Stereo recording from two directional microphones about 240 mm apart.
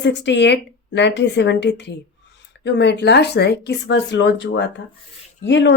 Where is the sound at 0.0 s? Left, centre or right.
Left.